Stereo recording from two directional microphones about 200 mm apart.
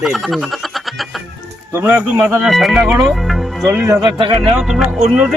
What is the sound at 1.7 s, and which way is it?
Speech, 10° right (ahead or behind).